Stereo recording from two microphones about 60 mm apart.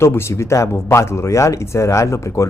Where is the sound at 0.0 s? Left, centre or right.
Left.